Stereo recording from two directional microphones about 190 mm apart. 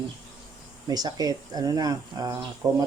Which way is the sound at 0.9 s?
20° right (ahead or behind).